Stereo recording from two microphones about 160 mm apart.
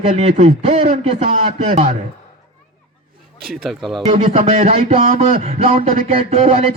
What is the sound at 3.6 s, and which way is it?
Speech, centre (ahead or behind).